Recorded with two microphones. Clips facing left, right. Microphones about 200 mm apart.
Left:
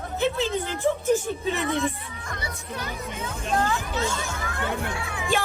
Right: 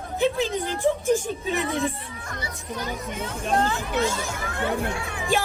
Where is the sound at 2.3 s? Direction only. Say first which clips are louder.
Right 2 dB; 60° left (ahead or behind).